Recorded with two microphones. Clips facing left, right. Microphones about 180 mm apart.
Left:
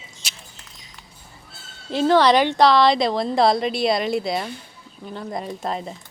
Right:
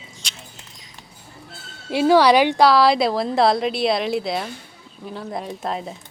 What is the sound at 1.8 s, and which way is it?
Speech, 10° right (ahead or behind).